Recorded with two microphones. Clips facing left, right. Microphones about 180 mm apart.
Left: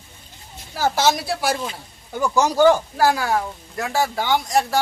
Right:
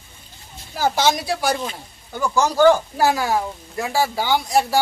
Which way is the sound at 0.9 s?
5° left (ahead or behind).